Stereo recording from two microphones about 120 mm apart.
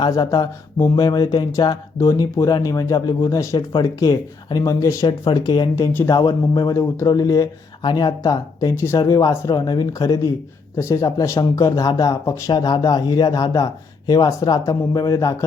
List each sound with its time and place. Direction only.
0.0 s mantra: 35° left (ahead or behind)
3.2 s speech: 25° left (ahead or behind)
5.2 s mantra: 35° left (ahead or behind)
8.7 s speech: 20° left (ahead or behind)
10.8 s mantra: 25° left (ahead or behind)
14.1 s speech: 30° left (ahead or behind)